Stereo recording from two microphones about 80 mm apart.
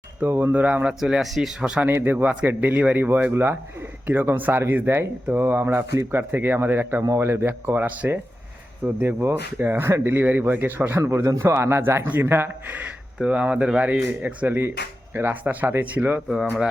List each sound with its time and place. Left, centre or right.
0.2 s speech: right
0.9 s speech: centre
1.9 s speech: right
11.0 s speech: right
13.1 s speech: centre